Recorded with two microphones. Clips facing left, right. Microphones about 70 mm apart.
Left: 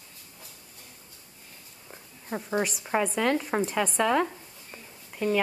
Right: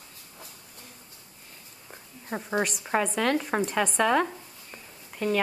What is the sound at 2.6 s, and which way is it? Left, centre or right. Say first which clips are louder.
A woman's voice: right 1 dB; centre.